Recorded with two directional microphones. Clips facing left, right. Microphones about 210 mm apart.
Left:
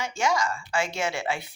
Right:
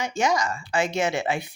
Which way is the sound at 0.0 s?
20° right (ahead or behind).